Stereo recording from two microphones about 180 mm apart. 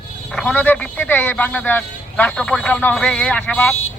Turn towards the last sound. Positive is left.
turn(degrees=10)  # may be behind; listen again after turning